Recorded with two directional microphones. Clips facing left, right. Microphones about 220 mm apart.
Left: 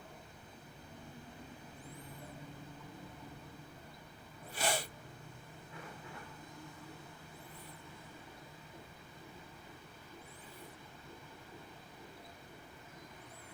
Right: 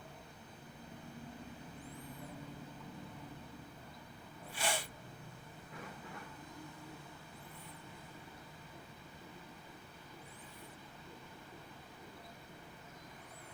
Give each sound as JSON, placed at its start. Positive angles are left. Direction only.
{"t": 4.5, "sound": "sneeze", "side_deg": 40}